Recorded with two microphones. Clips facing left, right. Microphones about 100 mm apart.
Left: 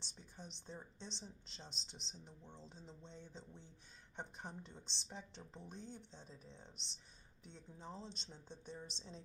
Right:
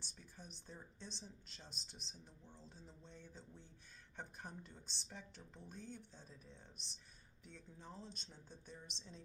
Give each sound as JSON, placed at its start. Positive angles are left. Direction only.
{"t": 0.0, "sound": "speech", "side_deg": 25}